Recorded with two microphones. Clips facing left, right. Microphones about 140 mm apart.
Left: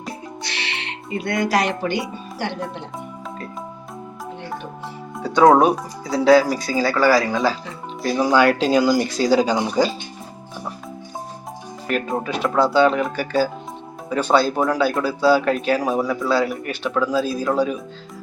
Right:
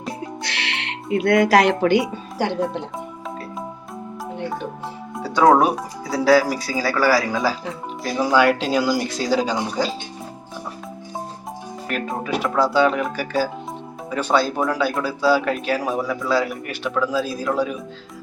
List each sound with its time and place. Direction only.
1.1 s speech: 90° right
5.1 s music: 5° right (ahead or behind)
5.5 s speech: 5° right (ahead or behind)
11.9 s speech: centre (ahead or behind)